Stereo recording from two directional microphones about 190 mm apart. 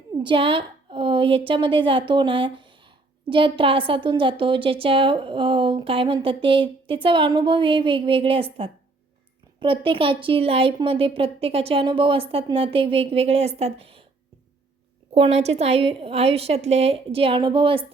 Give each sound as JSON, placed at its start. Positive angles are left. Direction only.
{"t": 0.2, "sound": "a woman's voice", "side_deg": -25}
{"t": 15.1, "sound": "a woman's voice", "side_deg": -35}